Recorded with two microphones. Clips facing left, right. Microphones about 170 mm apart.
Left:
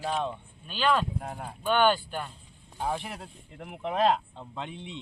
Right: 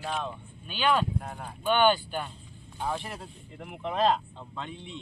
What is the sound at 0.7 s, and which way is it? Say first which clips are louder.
Speech: even; 5° right (ahead or behind).